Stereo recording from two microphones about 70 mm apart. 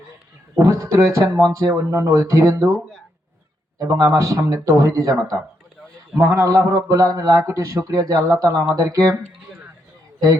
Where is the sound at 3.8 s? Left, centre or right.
Right.